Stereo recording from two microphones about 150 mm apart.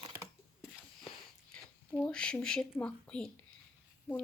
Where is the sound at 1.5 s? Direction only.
5° left (ahead or behind).